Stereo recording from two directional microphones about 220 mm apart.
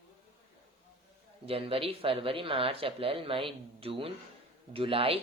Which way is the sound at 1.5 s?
25° right (ahead or behind).